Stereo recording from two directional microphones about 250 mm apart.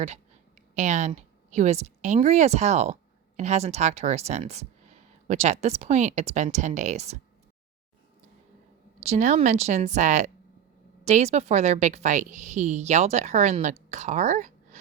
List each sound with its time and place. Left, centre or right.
0.8 s speech: right
9.0 s a woman's voice: right